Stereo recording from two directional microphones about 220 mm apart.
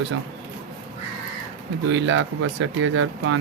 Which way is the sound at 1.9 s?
60° right (ahead or behind).